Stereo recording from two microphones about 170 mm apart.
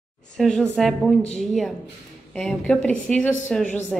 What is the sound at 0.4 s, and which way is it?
A woman's voice, centre (ahead or behind).